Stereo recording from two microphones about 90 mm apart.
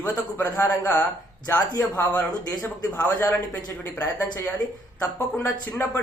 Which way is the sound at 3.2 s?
40° left (ahead or behind).